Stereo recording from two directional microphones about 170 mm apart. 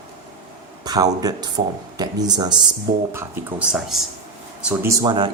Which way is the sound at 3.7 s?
Centre (ahead or behind).